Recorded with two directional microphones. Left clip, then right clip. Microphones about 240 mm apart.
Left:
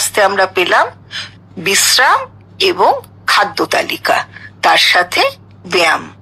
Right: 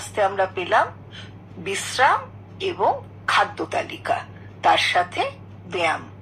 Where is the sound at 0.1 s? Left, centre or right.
Left.